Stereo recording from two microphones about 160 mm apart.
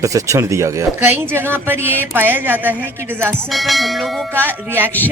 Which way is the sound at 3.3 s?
Centre (ahead or behind).